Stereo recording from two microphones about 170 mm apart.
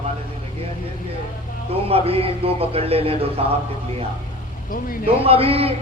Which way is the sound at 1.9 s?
35° right (ahead or behind).